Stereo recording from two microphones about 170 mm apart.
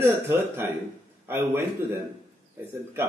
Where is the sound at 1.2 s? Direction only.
15° right (ahead or behind).